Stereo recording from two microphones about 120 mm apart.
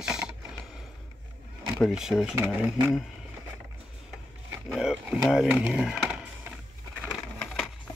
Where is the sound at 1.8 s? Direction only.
5° right (ahead or behind).